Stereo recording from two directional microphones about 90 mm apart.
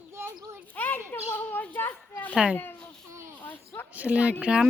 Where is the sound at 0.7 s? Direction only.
20° left (ahead or behind).